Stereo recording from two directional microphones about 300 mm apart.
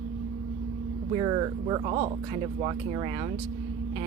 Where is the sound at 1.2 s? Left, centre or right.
Centre.